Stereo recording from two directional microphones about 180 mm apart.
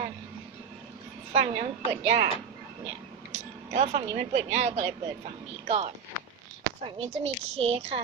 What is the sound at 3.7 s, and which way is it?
A woman's voice, 40° right (ahead or behind).